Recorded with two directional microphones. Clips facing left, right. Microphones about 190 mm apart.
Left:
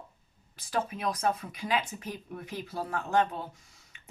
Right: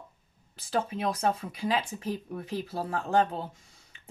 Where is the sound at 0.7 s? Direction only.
30° right (ahead or behind).